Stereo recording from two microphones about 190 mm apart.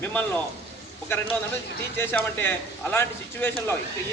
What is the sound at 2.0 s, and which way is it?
A man's voice, 10° left (ahead or behind).